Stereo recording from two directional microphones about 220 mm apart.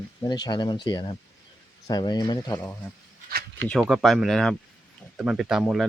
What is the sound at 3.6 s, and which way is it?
Speech, centre (ahead or behind).